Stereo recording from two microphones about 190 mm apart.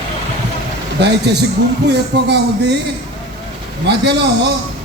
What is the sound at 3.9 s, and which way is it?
Speech, 60° right (ahead or behind).